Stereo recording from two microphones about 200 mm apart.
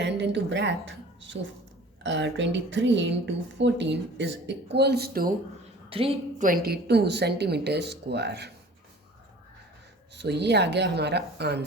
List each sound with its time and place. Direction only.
0.0 s a sound: 60° right (ahead or behind)
2.0 s speech: 65° right (ahead or behind)
5.9 s a woman's voice: 30° right (ahead or behind)
6.4 s speech: 50° right (ahead or behind)
10.2 s speech: 60° right (ahead or behind)